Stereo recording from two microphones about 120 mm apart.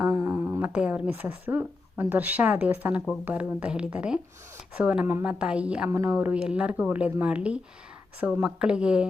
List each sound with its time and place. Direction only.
0.1 s humming: 25° right (ahead or behind)
0.6 s speech: 10° right (ahead or behind)